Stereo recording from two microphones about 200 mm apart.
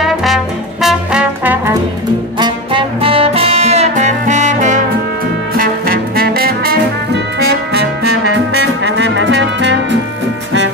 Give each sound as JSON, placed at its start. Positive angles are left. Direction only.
{"t": 0.0, "sound": "music", "side_deg": 0}
{"t": 2.3, "sound": "music", "side_deg": -25}
{"t": 8.8, "sound": "music", "side_deg": -65}